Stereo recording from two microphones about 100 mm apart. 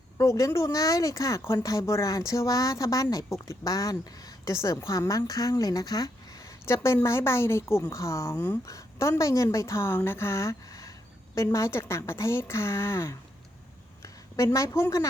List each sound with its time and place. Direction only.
0.2 s speech: 35° left (ahead or behind)
6.7 s a woman's voice: 25° left (ahead or behind)